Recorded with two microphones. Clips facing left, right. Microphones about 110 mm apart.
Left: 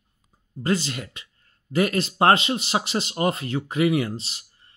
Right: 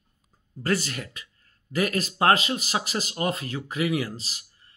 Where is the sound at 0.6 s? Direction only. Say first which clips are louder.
Left 2 dB; 20° left (ahead or behind).